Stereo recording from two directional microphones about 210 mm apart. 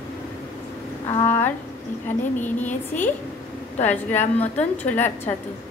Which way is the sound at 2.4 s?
10° left (ahead or behind).